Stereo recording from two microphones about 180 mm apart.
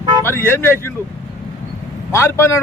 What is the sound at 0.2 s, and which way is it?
Speech, 10° left (ahead or behind).